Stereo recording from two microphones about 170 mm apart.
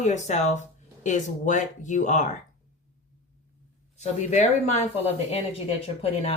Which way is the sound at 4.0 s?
45° left (ahead or behind).